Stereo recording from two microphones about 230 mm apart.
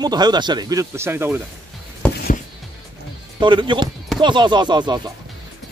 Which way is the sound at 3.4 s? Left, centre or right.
Right.